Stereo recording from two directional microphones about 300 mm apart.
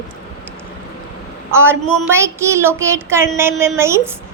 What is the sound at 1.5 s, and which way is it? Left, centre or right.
A child's voice, centre.